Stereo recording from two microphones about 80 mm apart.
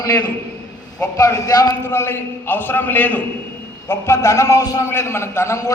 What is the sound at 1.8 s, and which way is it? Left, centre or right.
A man's voice, left.